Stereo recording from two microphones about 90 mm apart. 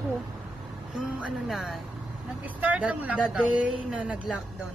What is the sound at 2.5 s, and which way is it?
Speech, 15° right (ahead or behind).